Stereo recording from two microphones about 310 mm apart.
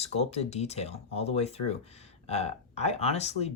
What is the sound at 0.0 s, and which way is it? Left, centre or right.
Speech, centre.